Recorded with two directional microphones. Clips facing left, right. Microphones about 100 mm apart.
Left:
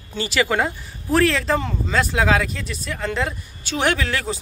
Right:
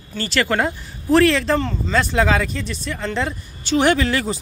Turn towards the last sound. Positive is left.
turn(degrees=0)  # may be behind; listen again after turning